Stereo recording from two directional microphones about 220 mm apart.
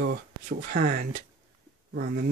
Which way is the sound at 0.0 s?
40° right (ahead or behind).